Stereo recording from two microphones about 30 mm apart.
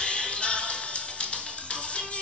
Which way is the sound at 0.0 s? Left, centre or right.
Left.